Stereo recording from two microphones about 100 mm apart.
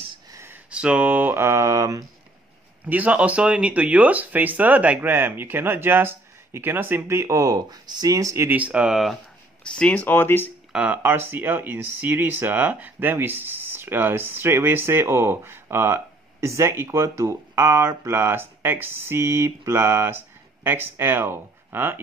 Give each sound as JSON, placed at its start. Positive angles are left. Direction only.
{"t": 0.3, "sound": "a sound", "side_deg": -25}
{"t": 0.7, "sound": "speech", "side_deg": -10}
{"t": 2.8, "sound": "speech", "side_deg": -15}
{"t": 8.5, "sound": "speech", "side_deg": -15}
{"t": 9.6, "sound": "speech", "side_deg": 10}
{"t": 10.7, "sound": "speech", "side_deg": -15}